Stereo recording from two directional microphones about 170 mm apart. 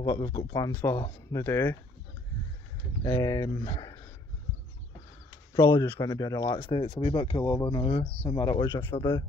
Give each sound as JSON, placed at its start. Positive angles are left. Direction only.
{"t": 0.0, "sound": "speech", "side_deg": 25}
{"t": 3.0, "sound": "speech", "side_deg": 20}
{"t": 5.5, "sound": "speech", "side_deg": 25}